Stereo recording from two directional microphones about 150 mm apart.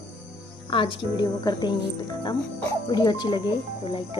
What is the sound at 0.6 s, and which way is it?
Speech, 35° left (ahead or behind).